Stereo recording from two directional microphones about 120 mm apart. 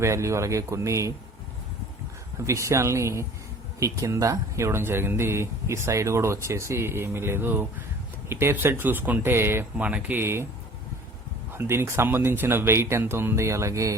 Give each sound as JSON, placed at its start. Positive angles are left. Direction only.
{"t": 0.0, "sound": "speech", "side_deg": -25}
{"t": 2.4, "sound": "speech", "side_deg": -25}
{"t": 11.5, "sound": "speech", "side_deg": -20}